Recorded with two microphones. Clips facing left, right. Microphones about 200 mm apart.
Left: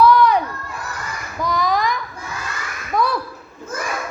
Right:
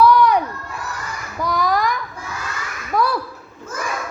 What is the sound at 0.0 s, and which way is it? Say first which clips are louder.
Crowd: even; 15° right (ahead or behind).